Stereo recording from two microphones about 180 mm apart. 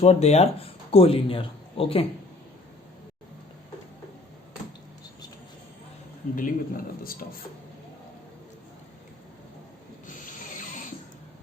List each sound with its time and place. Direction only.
0.0 s speech: 35° left (ahead or behind)
6.3 s a man's voice: 50° left (ahead or behind)
10.1 s rub: 45° left (ahead or behind)